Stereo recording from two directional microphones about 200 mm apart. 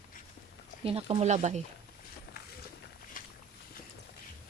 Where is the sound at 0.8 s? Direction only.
30° right (ahead or behind).